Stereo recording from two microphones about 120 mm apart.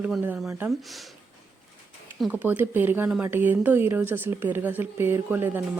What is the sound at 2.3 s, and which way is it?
Speech, 15° right (ahead or behind).